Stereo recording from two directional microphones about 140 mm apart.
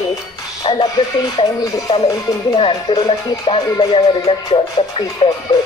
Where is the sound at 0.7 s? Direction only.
40° left (ahead or behind).